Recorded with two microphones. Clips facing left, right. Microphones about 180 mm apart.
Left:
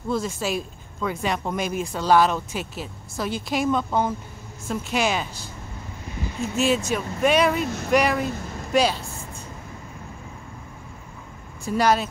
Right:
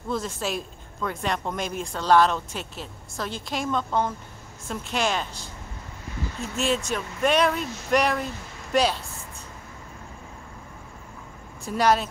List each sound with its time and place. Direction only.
0.1 s speech: centre (ahead or behind)
6.5 s speech: 5° left (ahead or behind)
7.6 s speech: 55° left (ahead or behind)
7.9 s speech: 5° left (ahead or behind)
11.6 s speech: centre (ahead or behind)